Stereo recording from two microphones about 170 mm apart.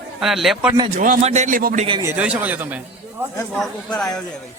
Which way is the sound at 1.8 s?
30° right (ahead or behind).